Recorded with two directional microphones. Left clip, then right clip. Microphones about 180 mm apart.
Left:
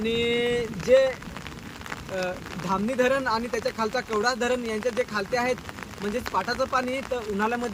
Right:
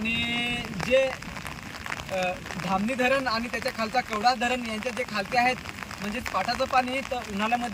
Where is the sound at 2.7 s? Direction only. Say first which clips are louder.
Left 1 dB; 10° left (ahead or behind).